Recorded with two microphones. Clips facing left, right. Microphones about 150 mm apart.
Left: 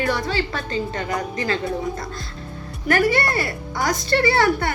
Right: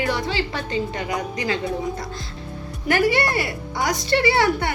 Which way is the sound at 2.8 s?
20° right (ahead or behind).